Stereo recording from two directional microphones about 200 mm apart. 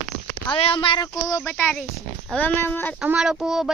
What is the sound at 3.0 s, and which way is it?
Speech, 5° right (ahead or behind).